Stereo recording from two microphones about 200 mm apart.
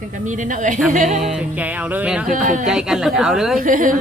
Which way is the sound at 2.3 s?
40° right (ahead or behind).